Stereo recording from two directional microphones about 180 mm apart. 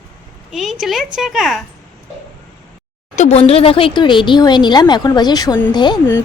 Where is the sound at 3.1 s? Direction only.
40° left (ahead or behind).